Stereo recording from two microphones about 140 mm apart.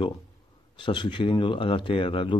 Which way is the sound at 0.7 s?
35° left (ahead or behind).